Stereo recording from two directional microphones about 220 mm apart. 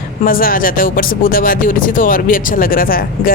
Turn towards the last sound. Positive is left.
turn(degrees=40)  # may be behind; listen again after turning